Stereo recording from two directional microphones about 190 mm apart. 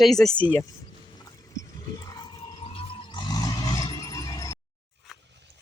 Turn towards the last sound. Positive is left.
turn(degrees=15)  # may be behind; listen again after turning